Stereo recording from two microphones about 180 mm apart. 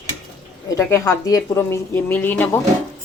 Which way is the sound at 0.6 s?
15° left (ahead or behind).